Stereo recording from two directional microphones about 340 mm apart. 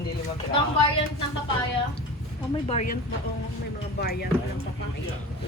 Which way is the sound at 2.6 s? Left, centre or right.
Left.